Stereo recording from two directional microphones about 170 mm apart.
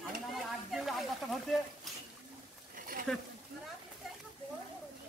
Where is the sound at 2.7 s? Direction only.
55° right (ahead or behind).